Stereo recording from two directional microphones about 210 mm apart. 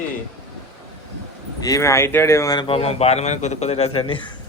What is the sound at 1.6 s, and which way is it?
A man's voice, 15° left (ahead or behind).